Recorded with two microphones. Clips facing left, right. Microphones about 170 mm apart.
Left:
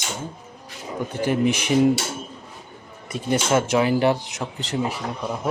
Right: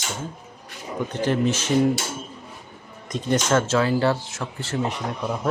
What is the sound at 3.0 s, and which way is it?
Speech, 10° left (ahead or behind).